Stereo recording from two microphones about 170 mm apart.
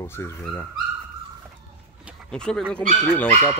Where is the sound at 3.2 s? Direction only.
15° left (ahead or behind).